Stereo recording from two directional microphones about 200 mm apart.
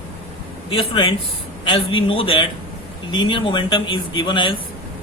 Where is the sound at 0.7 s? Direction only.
25° left (ahead or behind).